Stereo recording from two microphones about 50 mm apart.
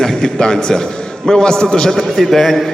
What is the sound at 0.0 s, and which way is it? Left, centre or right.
A man's voice, centre.